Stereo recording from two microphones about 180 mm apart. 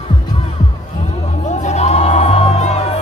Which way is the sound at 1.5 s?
40° left (ahead or behind).